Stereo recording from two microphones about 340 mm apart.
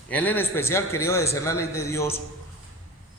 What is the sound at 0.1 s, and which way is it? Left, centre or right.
A man's voice, centre.